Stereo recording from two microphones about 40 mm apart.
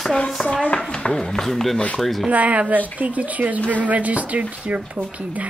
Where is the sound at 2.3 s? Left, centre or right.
Right.